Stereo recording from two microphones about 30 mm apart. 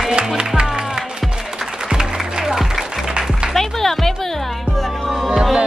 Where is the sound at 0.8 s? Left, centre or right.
Right.